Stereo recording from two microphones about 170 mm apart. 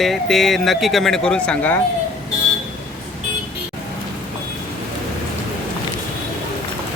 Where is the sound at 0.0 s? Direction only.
Centre (ahead or behind).